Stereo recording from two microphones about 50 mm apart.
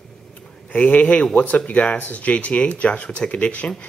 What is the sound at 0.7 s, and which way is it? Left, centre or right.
Speech, left.